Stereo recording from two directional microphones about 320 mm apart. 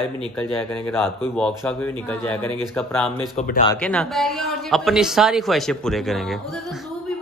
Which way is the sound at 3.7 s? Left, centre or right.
Centre.